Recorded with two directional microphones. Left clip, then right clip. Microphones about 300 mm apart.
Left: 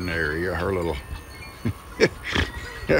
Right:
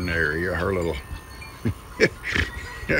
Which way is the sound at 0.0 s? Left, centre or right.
Centre.